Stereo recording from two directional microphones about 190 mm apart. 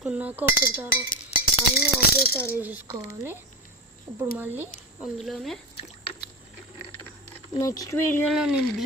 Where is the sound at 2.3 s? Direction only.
10° right (ahead or behind).